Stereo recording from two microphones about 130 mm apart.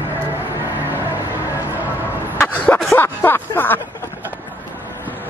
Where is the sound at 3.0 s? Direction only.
15° left (ahead or behind).